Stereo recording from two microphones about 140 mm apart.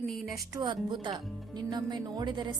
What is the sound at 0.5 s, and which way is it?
A woman's voice, 30° right (ahead or behind).